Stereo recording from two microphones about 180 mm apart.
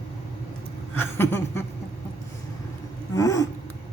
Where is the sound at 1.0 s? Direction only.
10° left (ahead or behind).